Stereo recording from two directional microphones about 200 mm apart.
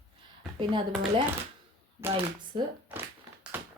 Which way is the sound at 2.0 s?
10° right (ahead or behind).